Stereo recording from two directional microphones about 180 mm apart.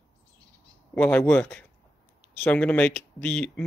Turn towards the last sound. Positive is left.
turn(degrees=5)  # may be behind; listen again after turning